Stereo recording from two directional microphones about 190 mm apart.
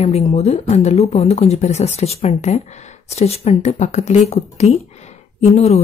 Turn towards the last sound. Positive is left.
turn(degrees=35)  # may be behind; listen again after turning